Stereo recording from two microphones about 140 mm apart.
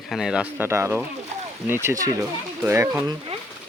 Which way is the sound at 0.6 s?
20° right (ahead or behind).